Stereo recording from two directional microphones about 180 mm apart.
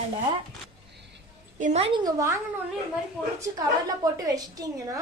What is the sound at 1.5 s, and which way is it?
Speech, 40° right (ahead or behind).